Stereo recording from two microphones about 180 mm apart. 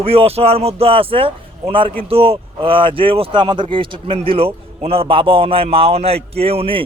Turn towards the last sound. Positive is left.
turn(degrees=-30)  # may be behind; listen again after turning